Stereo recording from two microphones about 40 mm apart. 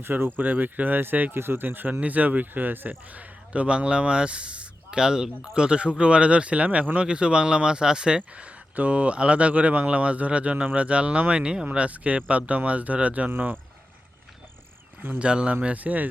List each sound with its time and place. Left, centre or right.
0.0 s speech: right
0.3 s speech: right
1.3 s speech: right
1.6 s speech: right
2.0 s speech: right
3.1 s speech: right
7.1 s speech: right
15.2 s speech: right
15.6 s speech: right